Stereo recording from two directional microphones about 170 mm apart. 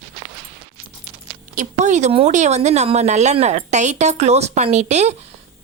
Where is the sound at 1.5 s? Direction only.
45° right (ahead or behind).